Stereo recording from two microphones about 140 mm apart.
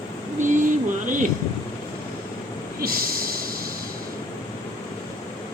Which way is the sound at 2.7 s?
90° right.